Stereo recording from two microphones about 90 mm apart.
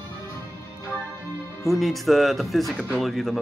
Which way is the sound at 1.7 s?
Centre (ahead or behind).